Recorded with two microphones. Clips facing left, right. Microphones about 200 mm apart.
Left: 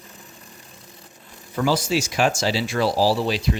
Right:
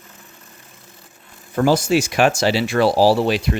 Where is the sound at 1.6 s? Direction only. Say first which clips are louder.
Right 5 dB; 50° right (ahead or behind).